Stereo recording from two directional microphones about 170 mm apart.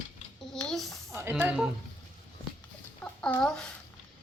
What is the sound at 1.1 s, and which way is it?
Speech, 10° right (ahead or behind).